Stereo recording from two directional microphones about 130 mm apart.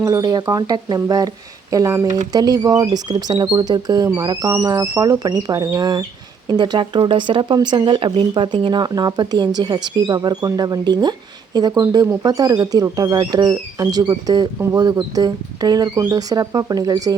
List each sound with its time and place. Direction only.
0.0 s speech: 25° right (ahead or behind)